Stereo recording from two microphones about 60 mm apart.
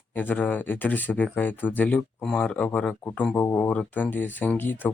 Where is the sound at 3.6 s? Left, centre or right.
Left.